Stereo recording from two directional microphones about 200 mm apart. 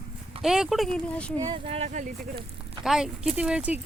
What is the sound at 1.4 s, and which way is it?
Speech, 25° right (ahead or behind).